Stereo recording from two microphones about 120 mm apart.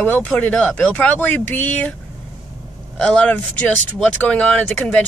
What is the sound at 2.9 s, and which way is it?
Speech, 10° left (ahead or behind).